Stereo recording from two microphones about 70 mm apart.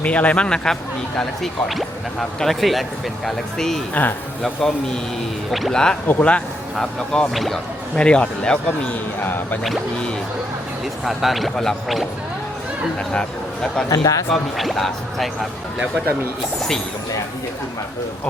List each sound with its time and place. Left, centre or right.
0.0 s speech: centre
4.0 s speech: left
5.5 s speech: centre
6.1 s speech: left
6.7 s speech: centre
7.9 s speech: centre
9.2 s speech: left
11.0 s speech: centre
13.1 s speech: centre
13.9 s a man's voice: left
14.3 s speech: centre